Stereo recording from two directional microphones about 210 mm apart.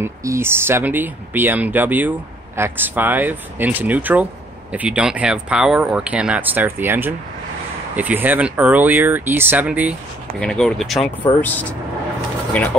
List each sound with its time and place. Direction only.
0.0 s speech: 15° right (ahead or behind)